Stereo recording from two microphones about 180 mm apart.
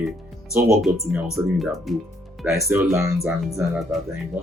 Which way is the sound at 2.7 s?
15° right (ahead or behind).